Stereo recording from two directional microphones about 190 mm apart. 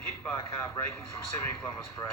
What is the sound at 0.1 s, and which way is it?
Speech, 15° left (ahead or behind).